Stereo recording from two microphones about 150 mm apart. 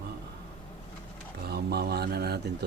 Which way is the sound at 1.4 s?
90° right.